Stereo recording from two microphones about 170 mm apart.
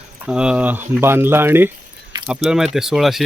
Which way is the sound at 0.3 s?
5° right (ahead or behind).